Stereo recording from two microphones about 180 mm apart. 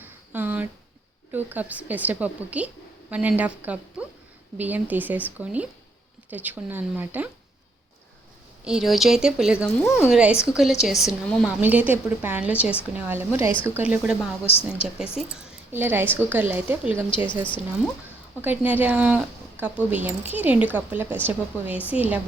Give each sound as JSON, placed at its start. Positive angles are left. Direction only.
{"t": 0.0, "sound": "a sound", "side_deg": -10}
{"t": 1.3, "sound": "a woman's voice", "side_deg": -10}
{"t": 8.6, "sound": "speech", "side_deg": 0}
{"t": 9.6, "sound": "speech", "side_deg": 15}
{"t": 10.0, "sound": "a woman's voice", "side_deg": -5}
{"t": 14.4, "sound": "a woman's voice", "side_deg": 35}
{"t": 14.9, "sound": "a woman's voice", "side_deg": -5}
{"t": 17.4, "sound": "speech", "side_deg": 5}
{"t": 18.4, "sound": "a woman's voice", "side_deg": -10}